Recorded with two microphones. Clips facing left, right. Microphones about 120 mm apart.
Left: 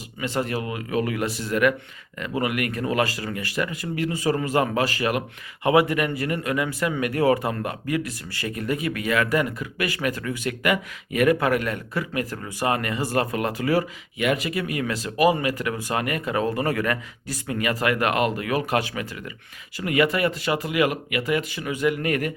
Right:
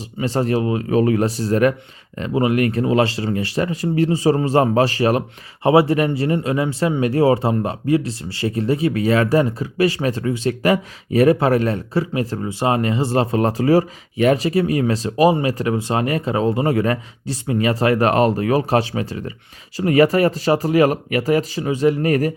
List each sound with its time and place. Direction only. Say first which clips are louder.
0.2 s speech: right 7 dB; 35° right (ahead or behind)